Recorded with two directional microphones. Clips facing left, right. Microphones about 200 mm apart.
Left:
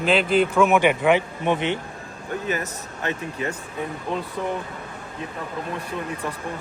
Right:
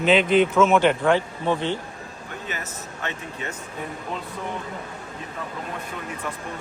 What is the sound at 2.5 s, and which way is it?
Speech, 35° left (ahead or behind).